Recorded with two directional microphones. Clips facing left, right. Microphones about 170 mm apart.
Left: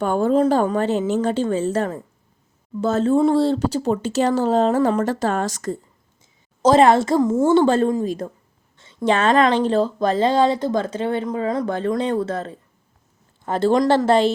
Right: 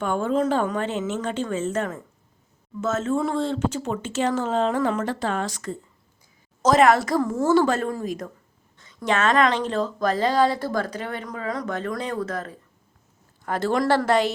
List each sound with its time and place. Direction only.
0.0 s speech: 35° left (ahead or behind)
6.6 s speech: 30° left (ahead or behind)